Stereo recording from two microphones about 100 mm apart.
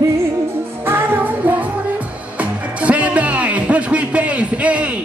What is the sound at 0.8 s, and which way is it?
Music, 20° right (ahead or behind).